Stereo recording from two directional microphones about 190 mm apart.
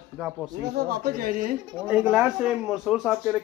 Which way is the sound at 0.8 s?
50° right (ahead or behind).